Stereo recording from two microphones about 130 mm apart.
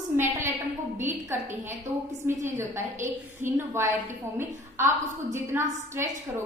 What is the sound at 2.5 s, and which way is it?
A woman's voice, 20° right (ahead or behind).